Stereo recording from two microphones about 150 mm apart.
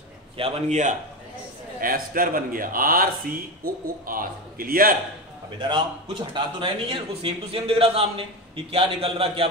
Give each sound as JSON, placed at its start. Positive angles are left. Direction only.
{"t": 0.4, "sound": "a man's voice", "side_deg": -50}
{"t": 1.8, "sound": "a man's voice", "side_deg": -70}
{"t": 5.6, "sound": "speech", "side_deg": -30}